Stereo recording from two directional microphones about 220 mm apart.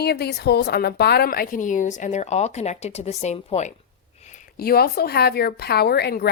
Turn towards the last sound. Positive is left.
turn(degrees=45)  # may be behind; listen again after turning